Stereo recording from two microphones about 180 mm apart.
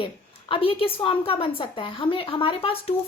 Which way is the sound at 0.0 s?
30° left (ahead or behind).